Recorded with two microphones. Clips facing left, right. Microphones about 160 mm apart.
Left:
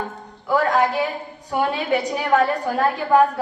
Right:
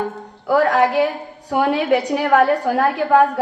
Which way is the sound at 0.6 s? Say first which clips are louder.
Right 5 dB; 70° right (ahead or behind).